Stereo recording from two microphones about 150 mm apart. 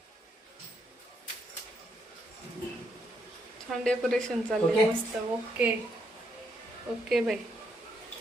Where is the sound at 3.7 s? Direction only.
5° left (ahead or behind).